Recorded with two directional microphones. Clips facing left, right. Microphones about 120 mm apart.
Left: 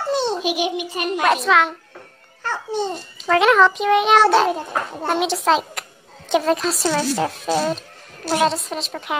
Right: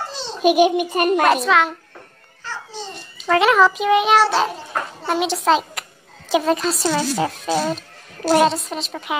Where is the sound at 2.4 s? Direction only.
55° left (ahead or behind).